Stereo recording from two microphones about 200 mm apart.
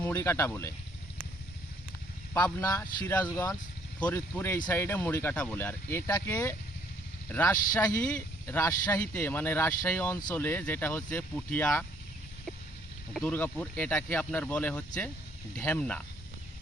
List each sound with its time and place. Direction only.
0.0 s speech: 10° left (ahead or behind)
2.4 s speech: 15° left (ahead or behind)
13.2 s speech: 10° left (ahead or behind)